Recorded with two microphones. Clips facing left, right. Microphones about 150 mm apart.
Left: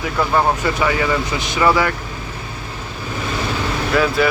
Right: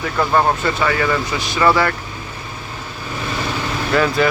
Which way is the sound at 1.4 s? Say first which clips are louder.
Right 1 dB; 20° left (ahead or behind).